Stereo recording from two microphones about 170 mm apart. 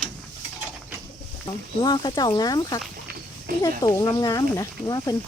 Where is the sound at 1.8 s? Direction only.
25° left (ahead or behind).